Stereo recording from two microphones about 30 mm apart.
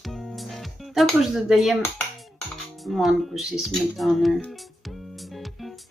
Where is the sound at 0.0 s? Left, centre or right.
Centre.